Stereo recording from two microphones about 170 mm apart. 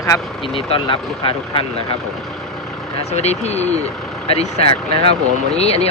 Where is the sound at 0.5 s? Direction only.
35° left (ahead or behind).